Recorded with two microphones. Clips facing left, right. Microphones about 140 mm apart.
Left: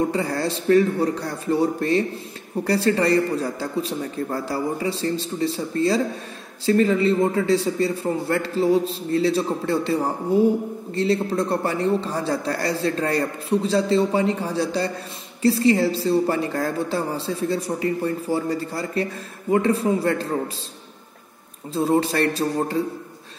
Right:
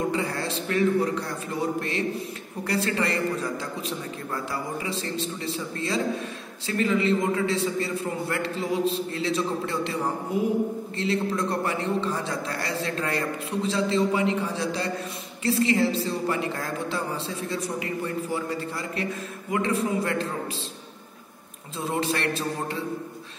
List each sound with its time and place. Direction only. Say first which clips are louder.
0.1 s a man's voice: left 4 dB; 35° left (ahead or behind)
21.7 s a man's voice: left 7 dB; 35° left (ahead or behind)